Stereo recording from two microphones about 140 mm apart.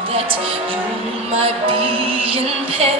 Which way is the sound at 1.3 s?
40° right (ahead or behind).